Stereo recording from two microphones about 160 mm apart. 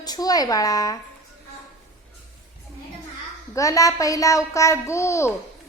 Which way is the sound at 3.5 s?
20° left (ahead or behind).